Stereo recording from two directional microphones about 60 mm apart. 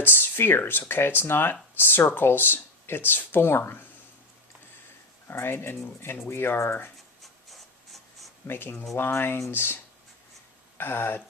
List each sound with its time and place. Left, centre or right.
0.0 s speech: left
5.3 s speech: left
7.2 s rub: centre
8.4 s speech: left
10.8 s speech: left